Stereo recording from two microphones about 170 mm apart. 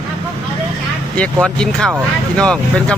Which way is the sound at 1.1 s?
5° left (ahead or behind).